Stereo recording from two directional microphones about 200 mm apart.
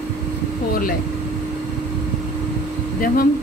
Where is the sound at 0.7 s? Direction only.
45° left (ahead or behind).